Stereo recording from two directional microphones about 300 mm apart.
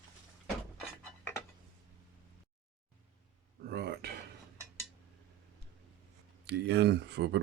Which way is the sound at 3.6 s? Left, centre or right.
Right.